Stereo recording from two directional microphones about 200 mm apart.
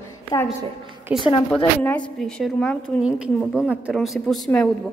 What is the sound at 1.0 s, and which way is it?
A woman's voice, 5° right (ahead or behind).